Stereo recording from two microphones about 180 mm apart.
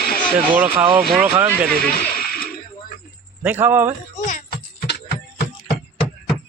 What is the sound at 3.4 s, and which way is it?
Speech, 10° right (ahead or behind).